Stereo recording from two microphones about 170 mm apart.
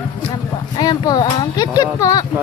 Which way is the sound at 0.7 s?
25° left (ahead or behind).